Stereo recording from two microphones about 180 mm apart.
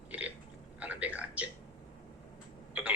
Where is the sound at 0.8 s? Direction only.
10° right (ahead or behind).